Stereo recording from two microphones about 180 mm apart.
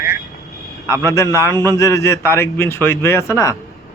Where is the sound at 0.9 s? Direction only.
15° left (ahead or behind).